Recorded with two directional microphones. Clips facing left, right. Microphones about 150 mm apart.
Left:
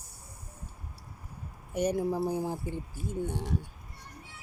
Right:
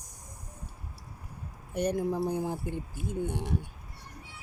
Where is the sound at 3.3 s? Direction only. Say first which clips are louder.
Right 1 dB; 55° right (ahead or behind).